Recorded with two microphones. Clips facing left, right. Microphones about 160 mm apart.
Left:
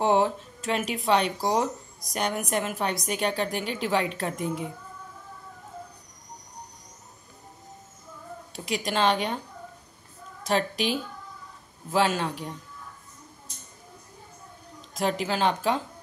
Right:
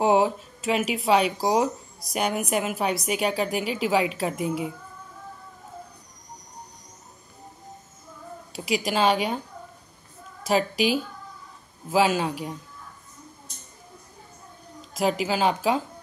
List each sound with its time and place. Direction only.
0.0 s speech: 10° right (ahead or behind)
8.5 s speech: 5° right (ahead or behind)
10.4 s speech: 5° right (ahead or behind)
15.0 s speech: 5° right (ahead or behind)